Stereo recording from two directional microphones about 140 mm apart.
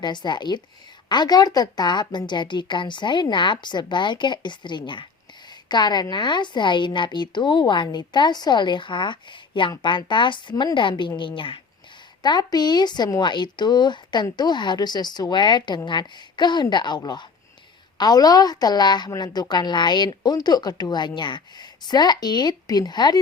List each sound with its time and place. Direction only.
0.0 s a woman's voice: 30° left (ahead or behind)